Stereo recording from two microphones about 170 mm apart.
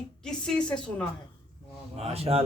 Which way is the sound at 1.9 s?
35° right (ahead or behind).